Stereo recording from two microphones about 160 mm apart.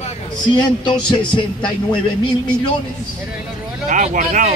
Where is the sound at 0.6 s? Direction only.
30° left (ahead or behind).